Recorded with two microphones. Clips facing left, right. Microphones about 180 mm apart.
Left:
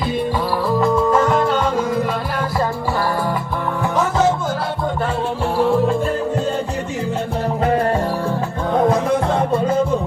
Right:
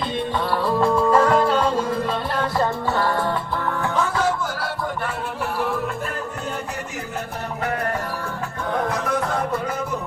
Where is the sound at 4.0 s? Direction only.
20° left (ahead or behind).